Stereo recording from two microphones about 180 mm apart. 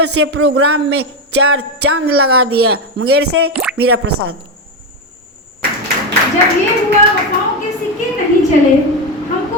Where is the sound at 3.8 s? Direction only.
65° right (ahead or behind).